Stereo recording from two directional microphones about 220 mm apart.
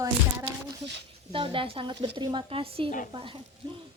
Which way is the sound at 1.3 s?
25° right (ahead or behind).